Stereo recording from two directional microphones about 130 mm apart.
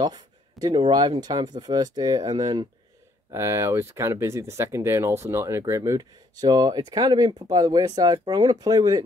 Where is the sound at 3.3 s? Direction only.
20° right (ahead or behind).